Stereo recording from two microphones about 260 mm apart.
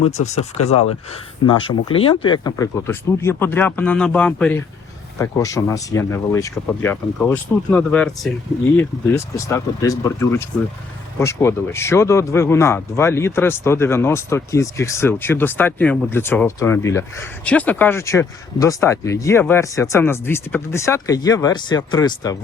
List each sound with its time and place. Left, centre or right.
0.0 s speech: left